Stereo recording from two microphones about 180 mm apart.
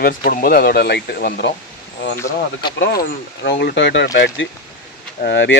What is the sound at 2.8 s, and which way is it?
Speech, 65° left (ahead or behind).